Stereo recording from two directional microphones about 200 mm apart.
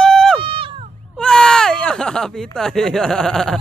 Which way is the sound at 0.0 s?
5° left (ahead or behind).